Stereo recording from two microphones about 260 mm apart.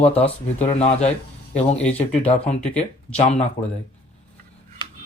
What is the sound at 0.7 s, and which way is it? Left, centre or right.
Speech, left.